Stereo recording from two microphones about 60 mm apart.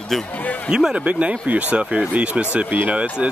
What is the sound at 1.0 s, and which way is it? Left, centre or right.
Speech, right.